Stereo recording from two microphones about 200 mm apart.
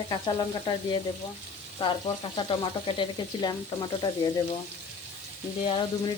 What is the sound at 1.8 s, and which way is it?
Frying, 25° left (ahead or behind).